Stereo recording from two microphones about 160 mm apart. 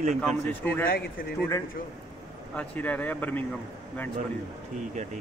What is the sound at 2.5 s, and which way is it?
Speech, 10° left (ahead or behind).